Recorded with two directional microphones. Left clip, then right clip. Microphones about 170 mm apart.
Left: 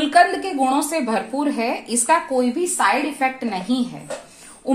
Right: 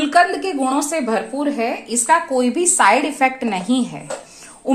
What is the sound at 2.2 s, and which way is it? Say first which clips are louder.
Speech: right 2 dB; 20° right (ahead or behind).